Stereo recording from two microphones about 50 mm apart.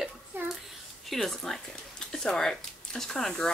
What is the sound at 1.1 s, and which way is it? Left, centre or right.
Speech, centre.